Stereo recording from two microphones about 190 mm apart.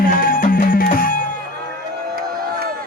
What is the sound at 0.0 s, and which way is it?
Music, 50° left (ahead or behind).